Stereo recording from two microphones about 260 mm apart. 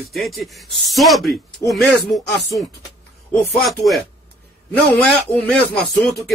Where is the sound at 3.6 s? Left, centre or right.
Centre.